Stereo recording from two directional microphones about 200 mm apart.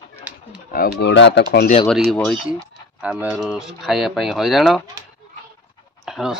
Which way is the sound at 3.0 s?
5° right (ahead or behind).